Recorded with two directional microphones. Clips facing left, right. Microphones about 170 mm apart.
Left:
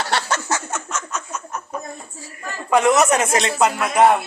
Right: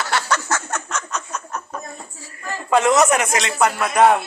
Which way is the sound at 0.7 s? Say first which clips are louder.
Right 1 dB; 5° left (ahead or behind).